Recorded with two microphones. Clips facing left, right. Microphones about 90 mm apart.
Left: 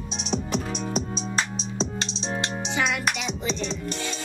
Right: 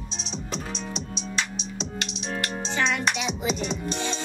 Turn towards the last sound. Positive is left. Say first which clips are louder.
# right 2 dB
turn(degrees=-20)  # may be behind; listen again after turning